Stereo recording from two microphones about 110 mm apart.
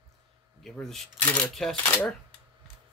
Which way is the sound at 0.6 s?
5° left (ahead or behind).